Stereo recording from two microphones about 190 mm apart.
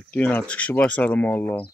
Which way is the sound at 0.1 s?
10° left (ahead or behind).